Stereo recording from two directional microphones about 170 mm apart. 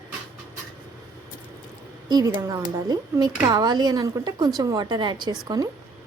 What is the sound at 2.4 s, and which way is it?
Speech, 20° right (ahead or behind).